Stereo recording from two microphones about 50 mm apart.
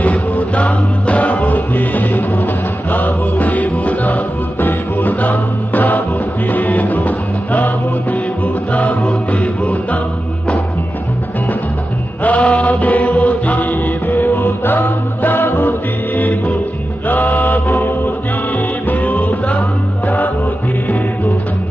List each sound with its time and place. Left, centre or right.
0.0 s music: left
8.7 s music: left
12.2 s mantra: left
14.1 s music: left
17.1 s a capella: left
18.9 s music: left